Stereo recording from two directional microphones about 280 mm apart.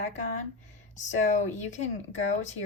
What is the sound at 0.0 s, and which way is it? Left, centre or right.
Speech, left.